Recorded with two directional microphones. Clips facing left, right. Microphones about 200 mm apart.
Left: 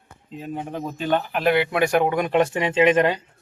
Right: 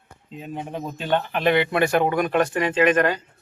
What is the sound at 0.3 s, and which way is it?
Speech, centre (ahead or behind).